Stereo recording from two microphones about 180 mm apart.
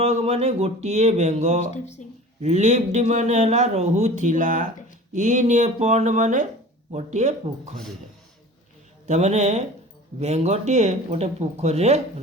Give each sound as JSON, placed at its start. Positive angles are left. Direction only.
{"t": 0.0, "sound": "a man's voice", "side_deg": -35}
{"t": 1.7, "sound": "speech", "side_deg": 40}
{"t": 2.4, "sound": "a man's voice", "side_deg": -40}
{"t": 9.0, "sound": "a man's voice", "side_deg": -40}